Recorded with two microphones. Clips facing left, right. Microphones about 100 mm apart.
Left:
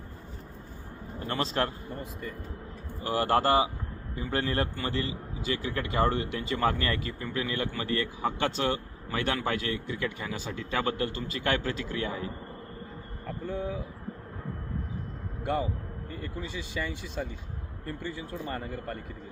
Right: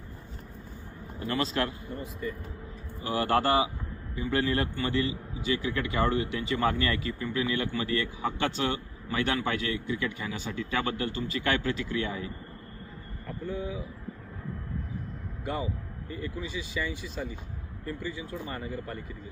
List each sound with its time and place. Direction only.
1.3 s a man's voice: 30° left (ahead or behind)
3.0 s a man's voice: 40° left (ahead or behind)
16.0 s speech: 55° left (ahead or behind)